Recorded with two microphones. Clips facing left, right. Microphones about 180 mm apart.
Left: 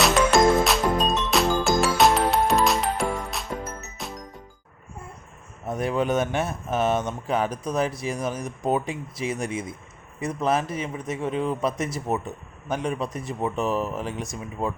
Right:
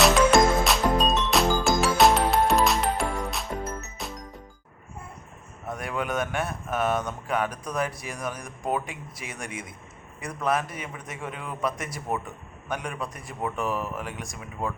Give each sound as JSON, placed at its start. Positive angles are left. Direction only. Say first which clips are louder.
{"t": 0.0, "sound": "music", "louder": "even", "side_deg": 0}
{"t": 5.6, "sound": "speech", "louder": "left 6 dB", "side_deg": 25}